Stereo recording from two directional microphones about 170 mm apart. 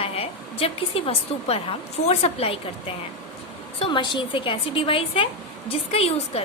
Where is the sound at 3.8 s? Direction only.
25° left (ahead or behind).